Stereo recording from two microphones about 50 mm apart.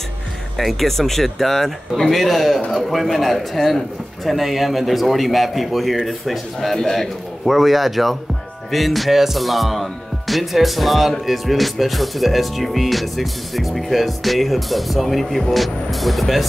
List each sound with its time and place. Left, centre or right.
0.6 s speech: centre